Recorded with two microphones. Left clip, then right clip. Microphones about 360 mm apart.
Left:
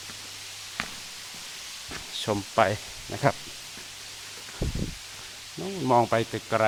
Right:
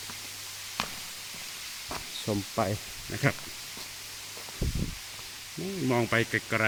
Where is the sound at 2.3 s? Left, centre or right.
Left.